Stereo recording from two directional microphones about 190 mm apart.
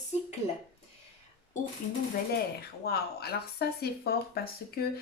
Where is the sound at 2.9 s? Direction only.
55° left (ahead or behind).